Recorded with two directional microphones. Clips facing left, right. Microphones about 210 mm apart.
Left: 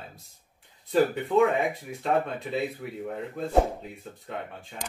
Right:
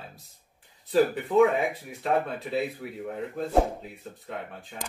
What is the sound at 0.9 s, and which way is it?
Speech, centre (ahead or behind).